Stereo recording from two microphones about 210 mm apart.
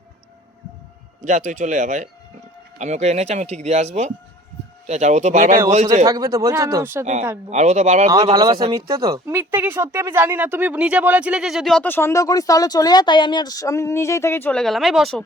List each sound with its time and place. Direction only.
1.2 s speech: 35° right (ahead or behind)
6.1 s speech: 15° right (ahead or behind)
7.0 s speech: 35° right (ahead or behind)
8.3 s speech: 20° right (ahead or behind); by 15.2 s centre (ahead or behind)